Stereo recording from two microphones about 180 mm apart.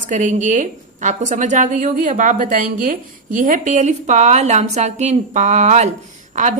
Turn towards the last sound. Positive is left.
turn(degrees=-45)  # may be behind; listen again after turning